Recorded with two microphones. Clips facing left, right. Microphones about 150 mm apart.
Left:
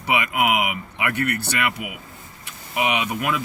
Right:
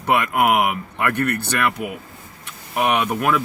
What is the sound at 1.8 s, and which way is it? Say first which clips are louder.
Speech: right 6 dB; 45° right (ahead or behind).